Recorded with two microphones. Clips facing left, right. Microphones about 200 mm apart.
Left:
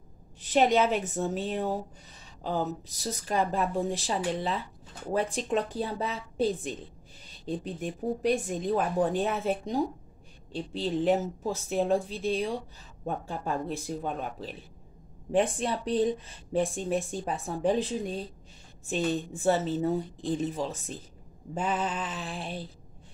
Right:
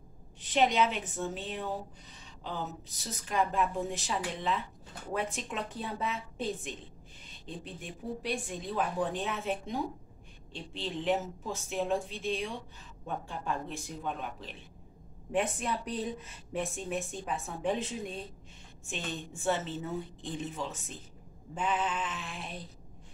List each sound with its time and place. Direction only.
0.4 s a woman's voice: 45° left (ahead or behind)